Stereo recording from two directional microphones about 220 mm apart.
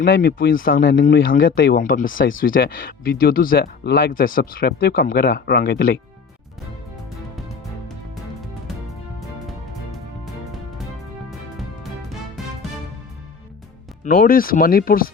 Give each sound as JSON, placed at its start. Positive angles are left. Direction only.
{"t": 0.0, "sound": "speech", "side_deg": 45}
{"t": 14.0, "sound": "speech", "side_deg": 40}